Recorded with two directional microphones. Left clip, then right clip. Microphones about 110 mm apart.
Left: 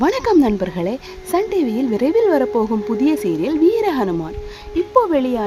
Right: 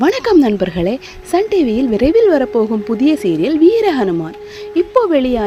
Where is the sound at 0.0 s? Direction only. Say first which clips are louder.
Right 3 dB; 25° right (ahead or behind).